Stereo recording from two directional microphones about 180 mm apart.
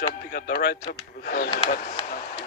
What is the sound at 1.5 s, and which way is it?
Speech, 40° left (ahead or behind).